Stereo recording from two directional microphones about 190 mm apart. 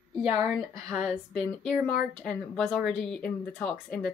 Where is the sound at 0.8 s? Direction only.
15° right (ahead or behind).